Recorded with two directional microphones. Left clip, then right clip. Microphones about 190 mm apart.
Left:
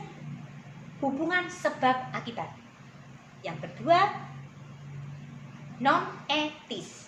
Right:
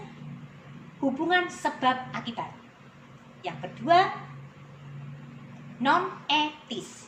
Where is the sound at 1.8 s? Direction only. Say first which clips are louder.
Even; 20° left (ahead or behind).